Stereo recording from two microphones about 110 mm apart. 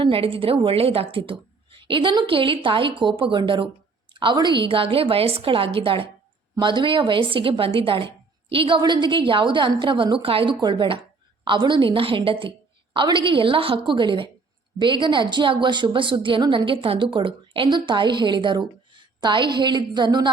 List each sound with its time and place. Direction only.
0.0 s a woman's voice: 55° right (ahead or behind)